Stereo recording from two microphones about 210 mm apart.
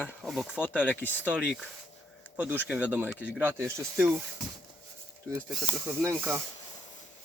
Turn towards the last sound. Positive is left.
turn(degrees=-10)  # may be behind; listen again after turning